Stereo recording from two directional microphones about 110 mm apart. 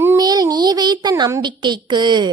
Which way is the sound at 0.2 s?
35° right (ahead or behind).